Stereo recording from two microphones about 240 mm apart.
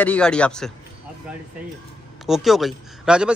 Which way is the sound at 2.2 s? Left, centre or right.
Centre.